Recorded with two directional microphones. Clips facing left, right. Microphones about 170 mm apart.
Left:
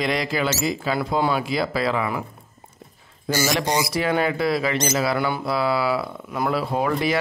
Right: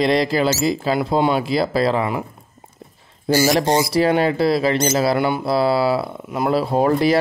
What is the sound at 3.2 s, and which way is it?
Speech, 35° right (ahead or behind).